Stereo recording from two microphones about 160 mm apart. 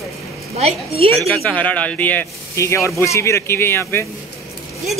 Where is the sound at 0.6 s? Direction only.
40° right (ahead or behind).